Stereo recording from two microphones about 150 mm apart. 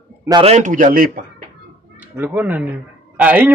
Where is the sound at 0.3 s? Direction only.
40° right (ahead or behind).